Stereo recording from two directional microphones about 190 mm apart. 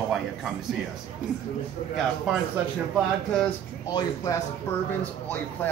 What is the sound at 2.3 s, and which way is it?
A man's voice, 5° right (ahead or behind).